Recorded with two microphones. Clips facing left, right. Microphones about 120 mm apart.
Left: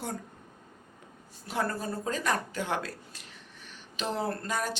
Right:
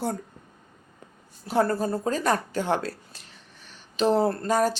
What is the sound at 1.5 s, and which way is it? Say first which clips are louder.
Speech: right 8 dB; 35° right (ahead or behind).